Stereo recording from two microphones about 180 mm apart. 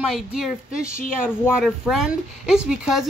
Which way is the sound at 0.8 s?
50° left (ahead or behind).